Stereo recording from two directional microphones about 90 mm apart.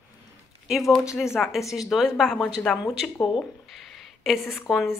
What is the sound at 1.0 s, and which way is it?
A woman's voice, 5° right (ahead or behind).